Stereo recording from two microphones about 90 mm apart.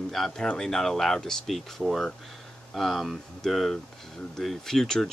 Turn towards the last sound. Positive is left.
turn(degrees=5)  # may be behind; listen again after turning